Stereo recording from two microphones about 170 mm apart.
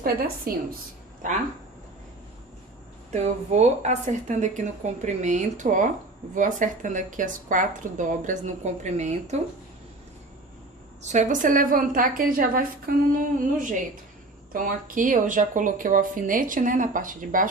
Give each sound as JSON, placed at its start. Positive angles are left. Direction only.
{"t": 0.0, "sound": "a woman's voice", "side_deg": -60}
{"t": 1.2, "sound": "a woman's voice", "side_deg": -50}
{"t": 3.1, "sound": "a woman's voice", "side_deg": -40}
{"t": 11.0, "sound": "a woman's voice", "side_deg": -45}
{"t": 14.5, "sound": "a woman's voice", "side_deg": -55}